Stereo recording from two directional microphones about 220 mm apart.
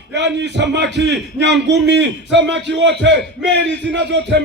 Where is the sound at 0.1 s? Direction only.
50° right (ahead or behind).